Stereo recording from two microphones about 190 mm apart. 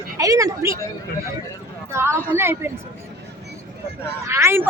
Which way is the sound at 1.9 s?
15° right (ahead or behind).